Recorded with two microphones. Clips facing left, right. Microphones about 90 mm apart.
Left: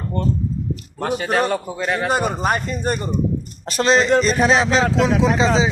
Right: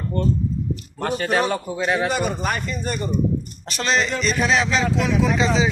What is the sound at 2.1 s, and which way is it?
Speech, 40° left (ahead or behind).